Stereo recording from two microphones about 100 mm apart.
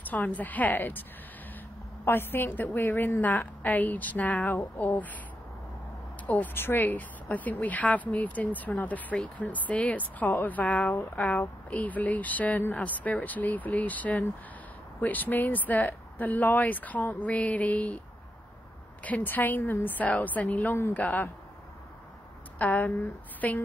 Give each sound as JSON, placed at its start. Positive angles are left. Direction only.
{"t": 0.1, "sound": "speech", "side_deg": 15}
{"t": 2.0, "sound": "speech", "side_deg": 20}
{"t": 6.2, "sound": "speech", "side_deg": 20}
{"t": 19.0, "sound": "speech", "side_deg": 15}
{"t": 22.6, "sound": "speech", "side_deg": 15}